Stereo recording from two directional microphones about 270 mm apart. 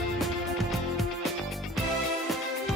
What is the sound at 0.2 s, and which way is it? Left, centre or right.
Music, centre.